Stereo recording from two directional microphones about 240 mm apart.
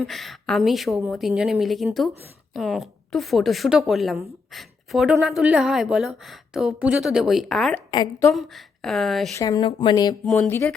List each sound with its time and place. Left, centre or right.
0.0 s a woman's voice: centre
7.9 s speech: centre
8.3 s a woman's voice: centre
9.4 s speech: centre
10.2 s speech: centre